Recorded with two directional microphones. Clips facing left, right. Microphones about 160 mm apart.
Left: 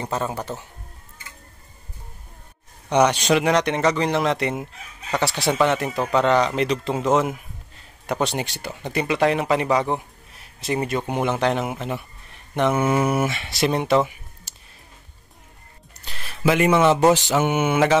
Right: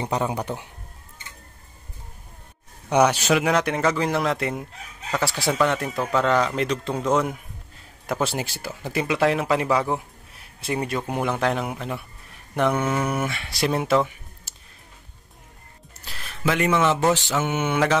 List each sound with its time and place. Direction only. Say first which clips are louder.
0.0 s speech: right 1 dB; 15° right (ahead or behind)
2.9 s speech: left 1 dB; 10° right (ahead or behind)
16.1 s a sound: left 4 dB; centre (ahead or behind)
17.3 s mantra: left 4 dB; 15° left (ahead or behind)